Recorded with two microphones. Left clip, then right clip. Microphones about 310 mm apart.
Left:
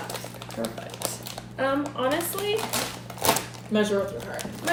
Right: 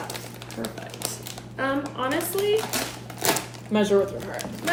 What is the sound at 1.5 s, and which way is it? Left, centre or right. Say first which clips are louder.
Speech: left 1 dB; centre.